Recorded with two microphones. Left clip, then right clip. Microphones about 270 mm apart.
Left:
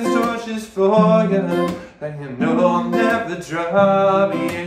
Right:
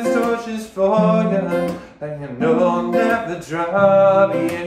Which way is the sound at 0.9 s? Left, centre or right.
Centre.